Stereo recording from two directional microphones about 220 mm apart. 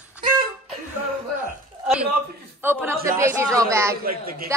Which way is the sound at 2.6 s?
10° right (ahead or behind).